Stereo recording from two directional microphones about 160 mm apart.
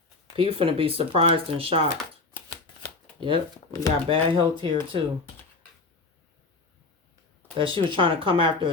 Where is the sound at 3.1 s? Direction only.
30° right (ahead or behind).